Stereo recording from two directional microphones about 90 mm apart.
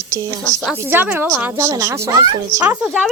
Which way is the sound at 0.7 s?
20° right (ahead or behind).